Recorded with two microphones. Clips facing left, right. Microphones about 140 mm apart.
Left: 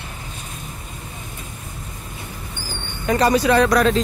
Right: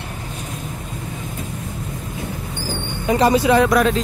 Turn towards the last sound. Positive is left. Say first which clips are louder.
# right 1 dB
turn(degrees=-10)  # may be behind; listen again after turning